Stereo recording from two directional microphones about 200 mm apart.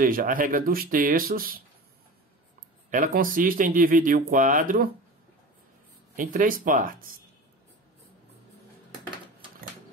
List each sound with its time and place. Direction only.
0.0 s speech: 45° right (ahead or behind)
2.9 s speech: 45° right (ahead or behind)
6.1 s speech: 45° right (ahead or behind)